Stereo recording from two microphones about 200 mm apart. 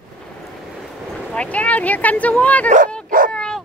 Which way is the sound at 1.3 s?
5° left (ahead or behind).